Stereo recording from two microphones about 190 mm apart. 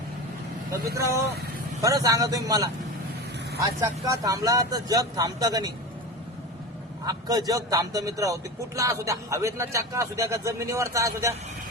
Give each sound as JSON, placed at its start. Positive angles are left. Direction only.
{"t": 1.8, "sound": "speech", "side_deg": -20}
{"t": 7.0, "sound": "a man's voice", "side_deg": -20}